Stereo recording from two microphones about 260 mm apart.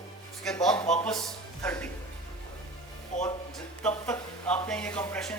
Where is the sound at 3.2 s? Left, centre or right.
Centre.